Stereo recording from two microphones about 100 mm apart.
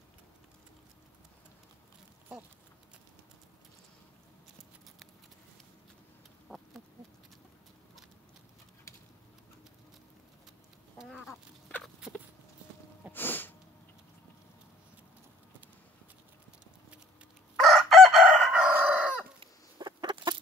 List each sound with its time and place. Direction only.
6.5 s chicken: 10° right (ahead or behind)
11.0 s a sound: 5° right (ahead or behind)
13.1 s sneeze: 20° left (ahead or behind)
17.6 s chicken: centre (ahead or behind)
18.6 s chicken: 15° right (ahead or behind)
19.4 s chicken: 50° right (ahead or behind)